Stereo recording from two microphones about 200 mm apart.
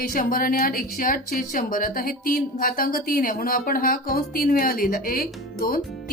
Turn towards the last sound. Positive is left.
turn(degrees=45)  # may be behind; listen again after turning